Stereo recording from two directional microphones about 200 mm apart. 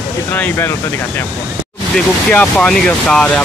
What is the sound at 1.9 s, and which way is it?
Speech, 5° left (ahead or behind).